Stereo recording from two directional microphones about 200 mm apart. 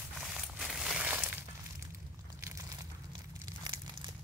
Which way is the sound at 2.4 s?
15° right (ahead or behind).